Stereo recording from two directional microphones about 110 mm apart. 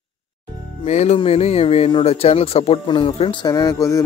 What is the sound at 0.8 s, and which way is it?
Music, 90° left.